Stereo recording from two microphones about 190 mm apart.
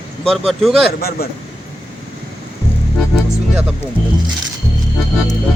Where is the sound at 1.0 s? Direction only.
55° left (ahead or behind).